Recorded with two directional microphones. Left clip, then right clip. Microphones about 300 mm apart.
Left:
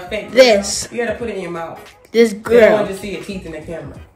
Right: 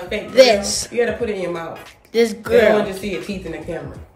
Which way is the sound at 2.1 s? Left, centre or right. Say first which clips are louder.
Left 3 dB; left.